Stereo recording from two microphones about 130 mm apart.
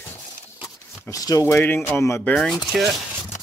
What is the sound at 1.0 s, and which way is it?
Speech, 25° left (ahead or behind).